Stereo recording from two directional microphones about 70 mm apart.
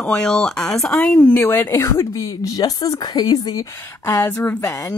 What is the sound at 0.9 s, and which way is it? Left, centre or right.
Speech, left.